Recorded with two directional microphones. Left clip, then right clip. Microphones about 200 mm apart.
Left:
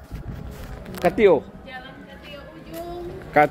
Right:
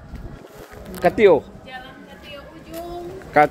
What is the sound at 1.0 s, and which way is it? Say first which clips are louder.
Speech: right 3 dB; 10° right (ahead or behind).